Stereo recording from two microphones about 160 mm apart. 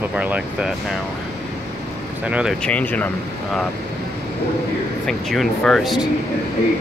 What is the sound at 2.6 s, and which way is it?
Speech, 10° left (ahead or behind).